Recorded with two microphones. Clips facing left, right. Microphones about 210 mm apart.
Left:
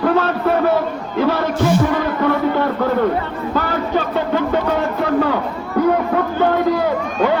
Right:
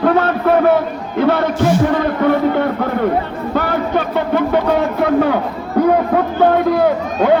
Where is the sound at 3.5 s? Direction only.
60° right (ahead or behind).